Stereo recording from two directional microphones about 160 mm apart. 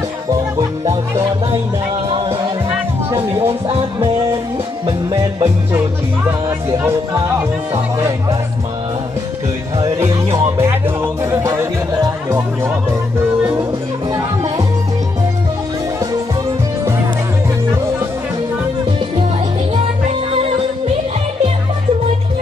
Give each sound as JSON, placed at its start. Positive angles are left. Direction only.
{"t": 0.3, "sound": "speech", "side_deg": -25}
{"t": 2.1, "sound": "music", "side_deg": -30}
{"t": 4.8, "sound": "music", "side_deg": -35}
{"t": 6.8, "sound": "speech", "side_deg": -15}
{"t": 9.8, "sound": "music", "side_deg": -20}
{"t": 19.7, "sound": "music", "side_deg": -40}